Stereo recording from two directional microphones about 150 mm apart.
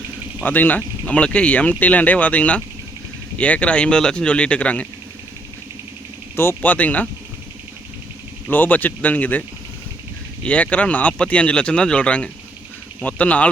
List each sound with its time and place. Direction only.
0.4 s speech: 10° left (ahead or behind)
6.3 s speech: 15° left (ahead or behind)
8.4 s speech: 10° left (ahead or behind)
10.4 s speech: 10° left (ahead or behind)